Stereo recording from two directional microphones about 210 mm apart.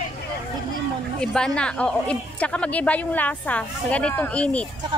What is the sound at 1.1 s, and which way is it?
Speech, 5° left (ahead or behind).